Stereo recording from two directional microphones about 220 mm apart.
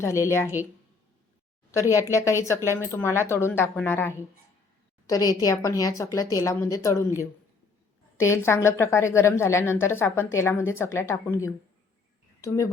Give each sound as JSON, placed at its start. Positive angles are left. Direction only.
{"t": 0.0, "sound": "a woman's voice", "side_deg": 10}
{"t": 1.7, "sound": "a woman's voice", "side_deg": 15}
{"t": 8.2, "sound": "a woman's voice", "side_deg": 10}